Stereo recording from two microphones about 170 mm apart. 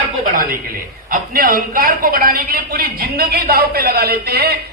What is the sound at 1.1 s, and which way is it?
A man's voice, 55° right (ahead or behind).